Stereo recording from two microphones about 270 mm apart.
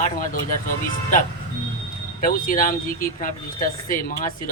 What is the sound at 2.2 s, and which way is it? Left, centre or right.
Speech, left.